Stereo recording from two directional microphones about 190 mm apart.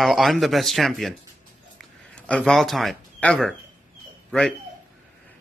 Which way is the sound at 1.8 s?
5° left (ahead or behind).